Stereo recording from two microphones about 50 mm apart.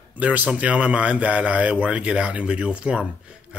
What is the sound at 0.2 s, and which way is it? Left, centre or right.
Speech, right.